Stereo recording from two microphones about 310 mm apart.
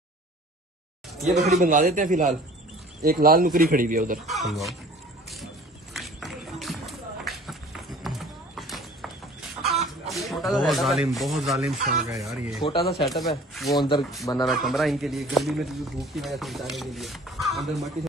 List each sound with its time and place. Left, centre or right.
1.2 s speech: centre
1.6 s speech: right
4.3 s speech: centre
5.9 s run: centre
8.0 s clip-clop: centre
9.6 s speech: centre
13.7 s speech: centre